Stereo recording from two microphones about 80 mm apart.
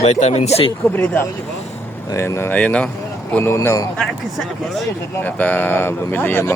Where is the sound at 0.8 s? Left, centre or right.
Left.